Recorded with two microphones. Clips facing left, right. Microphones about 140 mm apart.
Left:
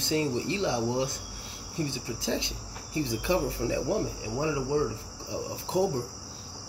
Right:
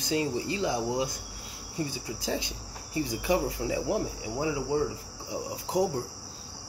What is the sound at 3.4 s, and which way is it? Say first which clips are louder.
Speech: left 1 dB; 15° right (ahead or behind).